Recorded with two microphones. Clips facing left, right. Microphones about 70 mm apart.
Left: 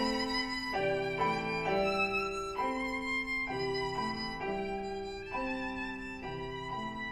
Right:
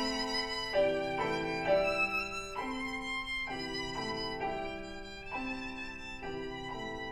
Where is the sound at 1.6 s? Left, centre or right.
Centre.